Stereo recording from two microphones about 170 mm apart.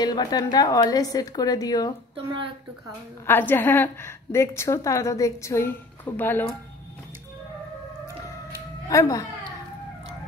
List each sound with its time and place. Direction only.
0.0 s a woman's voice: 25° left (ahead or behind)
2.1 s a woman's voice: 30° right (ahead or behind)
3.3 s a woman's voice: 10° left (ahead or behind)
8.8 s speech: 20° left (ahead or behind)